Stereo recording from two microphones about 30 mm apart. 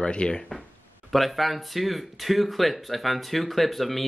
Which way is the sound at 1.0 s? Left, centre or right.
Centre.